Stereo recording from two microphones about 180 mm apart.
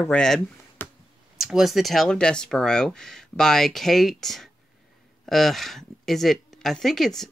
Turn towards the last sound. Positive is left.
turn(degrees=0)  # may be behind; listen again after turning